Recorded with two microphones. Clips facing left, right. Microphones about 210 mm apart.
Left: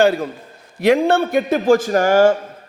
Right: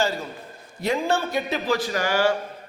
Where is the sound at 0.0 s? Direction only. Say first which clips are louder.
Left 10 dB; 55° left (ahead or behind).